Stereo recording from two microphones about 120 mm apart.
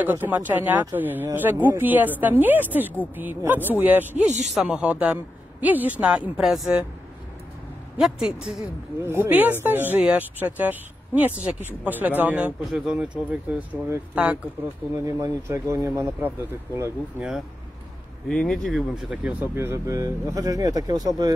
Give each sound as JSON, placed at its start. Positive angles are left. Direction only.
{"t": 0.0, "sound": "speech", "side_deg": -15}
{"t": 4.3, "sound": "speech", "side_deg": -75}
{"t": 4.6, "sound": "speech", "side_deg": -10}
{"t": 8.0, "sound": "speech", "side_deg": -5}
{"t": 9.0, "sound": "speech", "side_deg": -20}
{"t": 15.0, "sound": "speech", "side_deg": -25}
{"t": 18.3, "sound": "speech", "side_deg": 5}
{"t": 19.4, "sound": "speech", "side_deg": -20}